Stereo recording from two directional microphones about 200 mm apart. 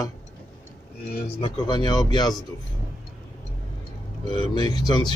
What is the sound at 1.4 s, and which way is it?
Speech, 25° left (ahead or behind).